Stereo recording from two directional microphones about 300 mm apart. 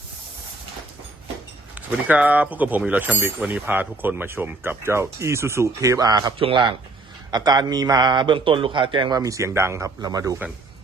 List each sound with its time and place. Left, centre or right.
2.0 s speech: centre